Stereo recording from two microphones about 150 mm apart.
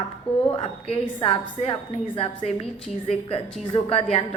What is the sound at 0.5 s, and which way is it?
A woman's voice, 40° left (ahead or behind).